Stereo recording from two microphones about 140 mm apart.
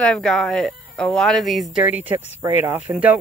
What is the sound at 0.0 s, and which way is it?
Speech, 5° left (ahead or behind).